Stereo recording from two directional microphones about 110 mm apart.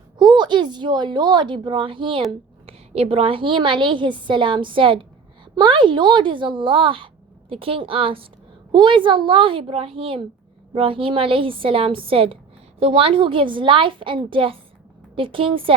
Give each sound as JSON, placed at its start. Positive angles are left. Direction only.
{"t": 0.2, "sound": "a woman's voice", "side_deg": -45}
{"t": 2.6, "sound": "a woman's voice", "side_deg": -65}